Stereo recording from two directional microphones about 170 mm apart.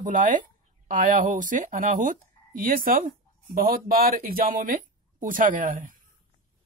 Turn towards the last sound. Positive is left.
turn(degrees=-50)  # may be behind; listen again after turning